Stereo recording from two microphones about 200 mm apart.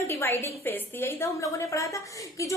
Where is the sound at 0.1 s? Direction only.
10° left (ahead or behind).